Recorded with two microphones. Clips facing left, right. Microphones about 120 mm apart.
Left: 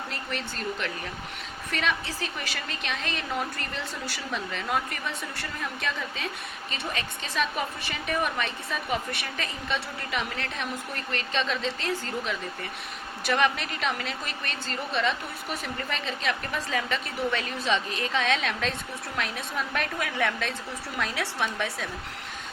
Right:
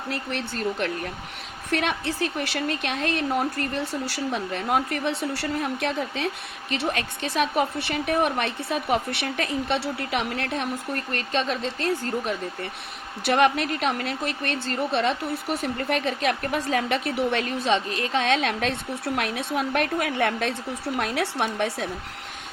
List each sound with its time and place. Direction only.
0.3 s a woman's voice: 60° right (ahead or behind)
17.3 s a woman's voice: 45° right (ahead or behind)
19.0 s a woman's voice: 60° right (ahead or behind)